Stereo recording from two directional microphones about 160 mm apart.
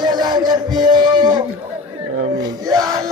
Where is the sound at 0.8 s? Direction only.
25° right (ahead or behind).